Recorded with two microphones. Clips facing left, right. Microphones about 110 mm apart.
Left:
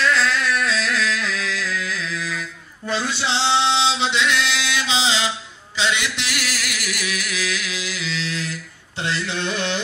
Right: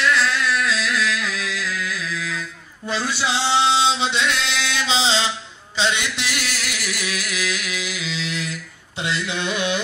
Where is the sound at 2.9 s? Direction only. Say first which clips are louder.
Even; 15° right (ahead or behind).